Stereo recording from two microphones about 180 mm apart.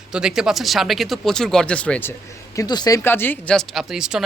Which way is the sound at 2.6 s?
20° left (ahead or behind).